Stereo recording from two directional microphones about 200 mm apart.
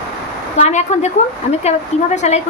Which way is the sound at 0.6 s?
35° left (ahead or behind).